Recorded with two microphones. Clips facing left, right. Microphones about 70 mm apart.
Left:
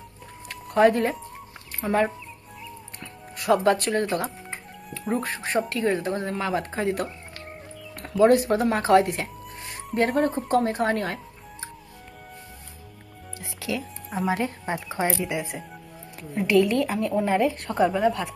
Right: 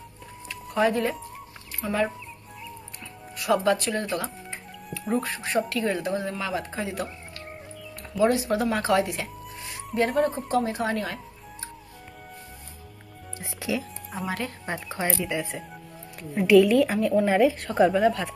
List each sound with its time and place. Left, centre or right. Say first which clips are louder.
0.5 s music: left 5 dB; left
1.8 s speech: left 3 dB; left
3.3 s music: left 2 dB; left
5.1 s a woman's voice: even; left
8.2 s a woman's voice: left 4 dB; left
13.7 s music: right 1 dB; centre
14.3 s speech: left 2 dB; left
16.2 s a woman's voice: right 3 dB; centre